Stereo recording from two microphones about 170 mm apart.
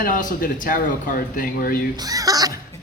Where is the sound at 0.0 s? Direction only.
50° left (ahead or behind).